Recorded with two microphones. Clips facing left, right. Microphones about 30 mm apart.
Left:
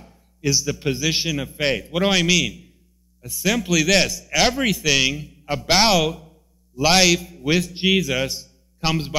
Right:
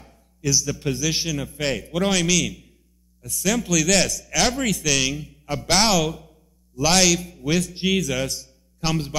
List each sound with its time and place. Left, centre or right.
0.4 s a man's voice: left
7.2 s a man's voice: centre
7.4 s a man's voice: left